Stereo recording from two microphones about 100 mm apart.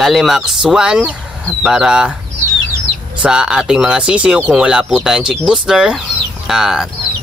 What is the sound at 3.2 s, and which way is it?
Speech, 10° right (ahead or behind).